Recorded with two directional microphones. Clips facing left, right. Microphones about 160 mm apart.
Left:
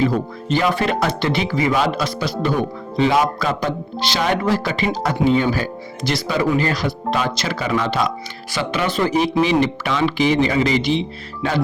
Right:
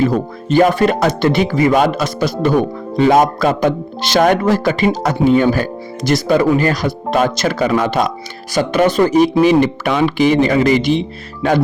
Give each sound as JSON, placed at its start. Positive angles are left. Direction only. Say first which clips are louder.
{"t": 0.5, "sound": "speech", "louder": "right 7 dB", "side_deg": -45}